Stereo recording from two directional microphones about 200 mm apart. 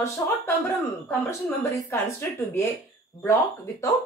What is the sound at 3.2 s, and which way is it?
Speech, 15° left (ahead or behind).